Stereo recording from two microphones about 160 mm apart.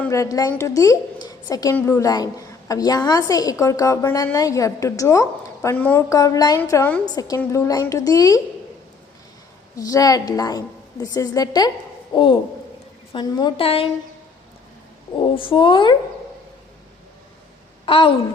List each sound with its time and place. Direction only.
0.1 s a woman's voice: 20° left (ahead or behind)
9.7 s a woman's voice: 20° left (ahead or behind)
15.2 s a woman's voice: 30° left (ahead or behind)
17.8 s a woman's voice: 35° left (ahead or behind)